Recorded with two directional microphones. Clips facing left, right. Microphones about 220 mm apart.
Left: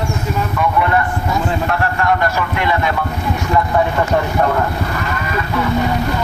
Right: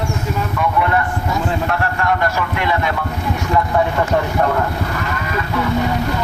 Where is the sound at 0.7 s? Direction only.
15° left (ahead or behind).